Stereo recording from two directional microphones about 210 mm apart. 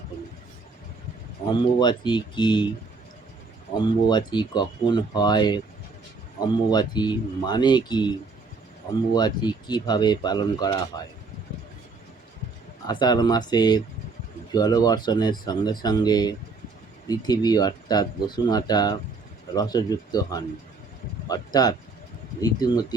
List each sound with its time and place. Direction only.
1.8 s speech: 20° left (ahead or behind)
3.8 s speech: 20° left (ahead or behind)
6.7 s speech: 20° left (ahead or behind)
9.1 s speech: 20° left (ahead or behind)
12.9 s speech: 20° left (ahead or behind)